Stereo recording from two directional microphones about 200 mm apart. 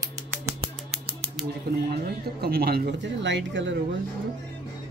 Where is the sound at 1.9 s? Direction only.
50° right (ahead or behind).